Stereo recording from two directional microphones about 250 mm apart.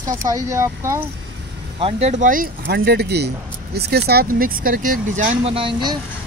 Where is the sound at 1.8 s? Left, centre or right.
Right.